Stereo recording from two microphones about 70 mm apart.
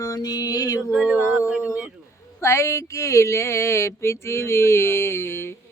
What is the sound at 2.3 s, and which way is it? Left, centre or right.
Speech, left.